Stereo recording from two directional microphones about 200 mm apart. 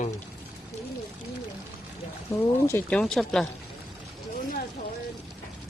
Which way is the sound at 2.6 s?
10° left (ahead or behind).